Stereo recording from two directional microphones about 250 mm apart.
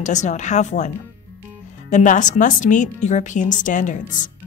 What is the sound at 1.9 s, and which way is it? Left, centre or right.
A woman's voice, left.